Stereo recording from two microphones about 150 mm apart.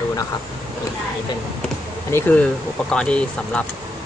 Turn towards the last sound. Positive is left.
turn(degrees=5)  # may be behind; listen again after turning